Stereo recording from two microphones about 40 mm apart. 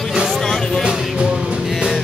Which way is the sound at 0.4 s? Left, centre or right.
Centre.